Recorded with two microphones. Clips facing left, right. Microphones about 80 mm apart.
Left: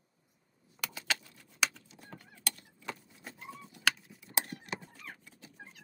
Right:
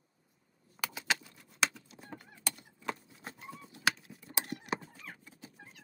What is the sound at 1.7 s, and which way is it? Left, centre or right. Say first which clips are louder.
Fowl: right 3 dB; centre.